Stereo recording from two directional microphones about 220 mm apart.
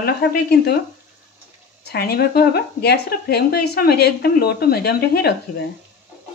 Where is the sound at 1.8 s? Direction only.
45° left (ahead or behind).